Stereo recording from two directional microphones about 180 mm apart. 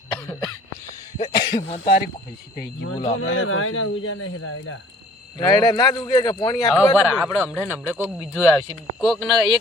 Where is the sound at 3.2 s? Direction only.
90° left.